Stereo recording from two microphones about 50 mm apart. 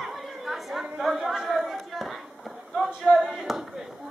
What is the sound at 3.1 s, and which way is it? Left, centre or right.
Chop, centre.